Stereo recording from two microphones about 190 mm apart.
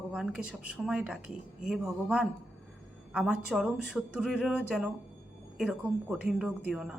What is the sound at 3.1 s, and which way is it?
Speech, 5° right (ahead or behind).